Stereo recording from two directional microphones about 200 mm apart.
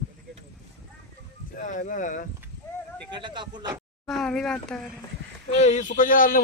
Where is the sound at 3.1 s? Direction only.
25° right (ahead or behind).